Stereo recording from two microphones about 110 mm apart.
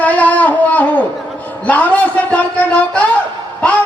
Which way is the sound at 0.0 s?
15° left (ahead or behind).